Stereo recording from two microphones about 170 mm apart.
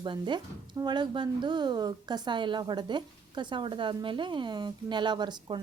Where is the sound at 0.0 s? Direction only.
25° right (ahead or behind).